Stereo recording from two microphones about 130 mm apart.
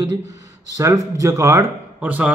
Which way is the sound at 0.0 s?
35° right (ahead or behind).